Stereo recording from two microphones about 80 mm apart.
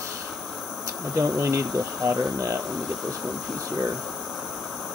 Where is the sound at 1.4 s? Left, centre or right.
Right.